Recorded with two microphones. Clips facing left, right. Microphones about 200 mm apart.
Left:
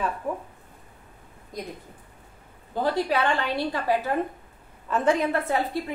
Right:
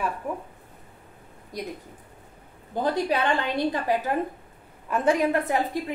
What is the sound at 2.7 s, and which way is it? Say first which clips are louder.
A woman's voice: even; 20° right (ahead or behind).